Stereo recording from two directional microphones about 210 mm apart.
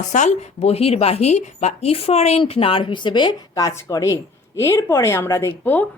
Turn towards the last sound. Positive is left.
turn(degrees=10)  # may be behind; listen again after turning